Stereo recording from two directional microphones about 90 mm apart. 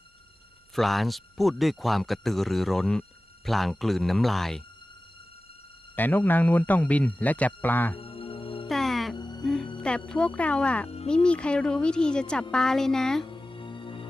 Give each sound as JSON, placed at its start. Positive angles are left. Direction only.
{"t": 0.8, "sound": "speech", "side_deg": 0}
{"t": 6.0, "sound": "speech", "side_deg": 20}
{"t": 7.9, "sound": "music", "side_deg": 90}
{"t": 8.6, "sound": "music", "side_deg": 5}
{"t": 9.1, "sound": "music", "side_deg": 50}
{"t": 9.4, "sound": "music", "side_deg": 5}
{"t": 10.1, "sound": "a woman's voice", "side_deg": 10}
{"t": 13.2, "sound": "music", "side_deg": 65}